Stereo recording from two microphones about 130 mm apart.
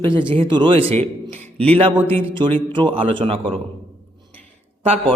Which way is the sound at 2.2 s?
40° right (ahead or behind).